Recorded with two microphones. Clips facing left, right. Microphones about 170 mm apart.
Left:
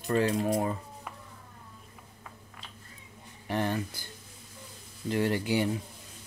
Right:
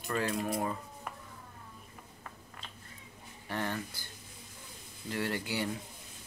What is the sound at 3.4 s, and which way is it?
Speech, 20° left (ahead or behind).